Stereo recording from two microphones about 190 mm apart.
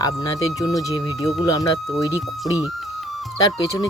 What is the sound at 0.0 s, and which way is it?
Speech, 20° left (ahead or behind).